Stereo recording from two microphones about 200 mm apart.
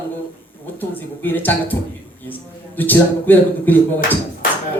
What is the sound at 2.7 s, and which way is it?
Speech, 10° left (ahead or behind).